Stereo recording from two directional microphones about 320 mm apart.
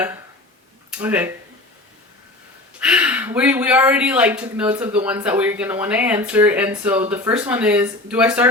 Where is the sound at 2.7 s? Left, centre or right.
Centre.